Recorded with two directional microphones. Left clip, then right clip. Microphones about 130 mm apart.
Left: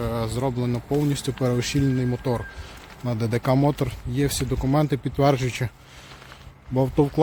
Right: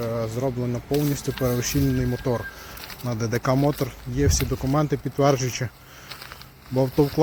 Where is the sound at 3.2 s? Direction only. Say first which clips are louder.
Even; 35° left (ahead or behind).